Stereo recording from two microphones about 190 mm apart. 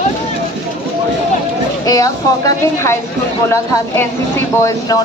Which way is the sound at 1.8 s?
20° left (ahead or behind).